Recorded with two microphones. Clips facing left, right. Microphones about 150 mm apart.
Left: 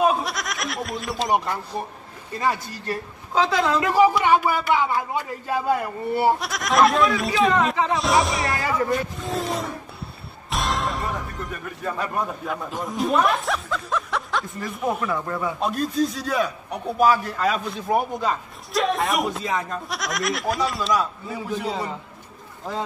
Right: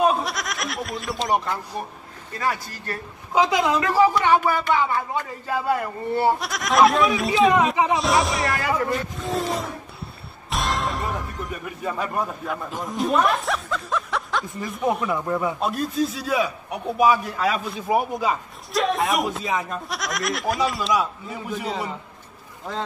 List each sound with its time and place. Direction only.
0.0 s goat: centre (ahead or behind)
1.3 s speech: 15° left (ahead or behind)
3.3 s a man's voice: 15° right (ahead or behind)
3.8 s a man's voice: 15° left (ahead or behind); by 21.9 s centre (ahead or behind)